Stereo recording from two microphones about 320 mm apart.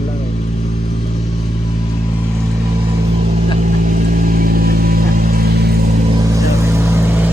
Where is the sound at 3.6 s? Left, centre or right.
Right.